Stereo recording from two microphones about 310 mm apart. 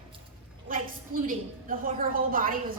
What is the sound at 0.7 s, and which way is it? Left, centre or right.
A woman's voice, right.